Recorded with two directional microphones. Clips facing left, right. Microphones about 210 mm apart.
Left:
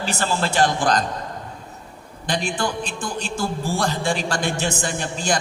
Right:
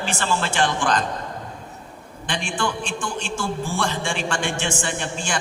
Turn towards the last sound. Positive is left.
turn(degrees=40)  # may be behind; listen again after turning